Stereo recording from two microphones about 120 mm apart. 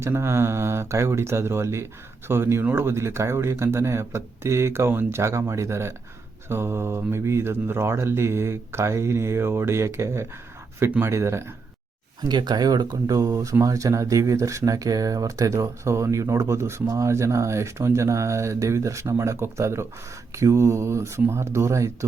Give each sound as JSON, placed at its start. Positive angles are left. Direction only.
{"t": 0.0, "sound": "speech", "side_deg": -20}
{"t": 12.3, "sound": "speech", "side_deg": -35}